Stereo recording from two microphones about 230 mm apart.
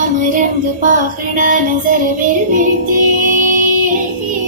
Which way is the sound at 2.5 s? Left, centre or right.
Right.